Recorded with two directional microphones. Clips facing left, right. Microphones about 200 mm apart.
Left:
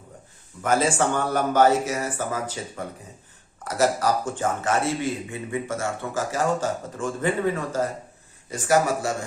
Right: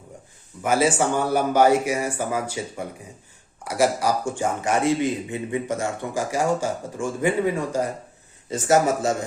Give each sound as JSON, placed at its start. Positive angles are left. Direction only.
{"t": 0.6, "sound": "a man's voice", "side_deg": -10}